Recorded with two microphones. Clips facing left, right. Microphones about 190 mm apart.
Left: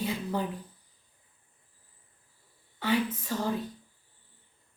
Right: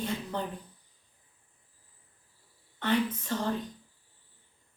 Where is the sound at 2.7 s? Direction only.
10° left (ahead or behind).